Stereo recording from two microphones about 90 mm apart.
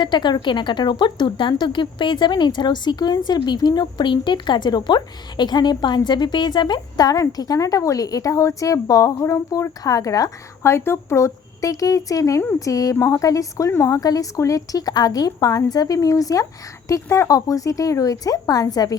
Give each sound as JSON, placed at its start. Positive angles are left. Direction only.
{"t": 0.0, "sound": "speech", "side_deg": 55}